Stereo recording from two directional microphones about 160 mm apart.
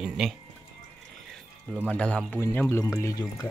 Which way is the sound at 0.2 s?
5° right (ahead or behind).